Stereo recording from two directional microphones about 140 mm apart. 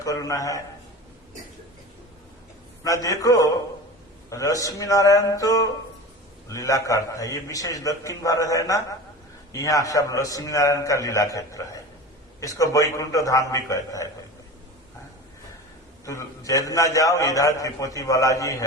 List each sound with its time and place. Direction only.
0.0 s a man's voice: 25° left (ahead or behind)
2.8 s a man's voice: 25° left (ahead or behind)
16.0 s a man's voice: 25° left (ahead or behind)